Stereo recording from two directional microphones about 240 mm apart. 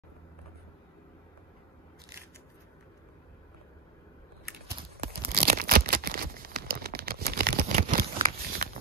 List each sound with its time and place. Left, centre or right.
5.3 s tearing: right
7.7 s scissors: right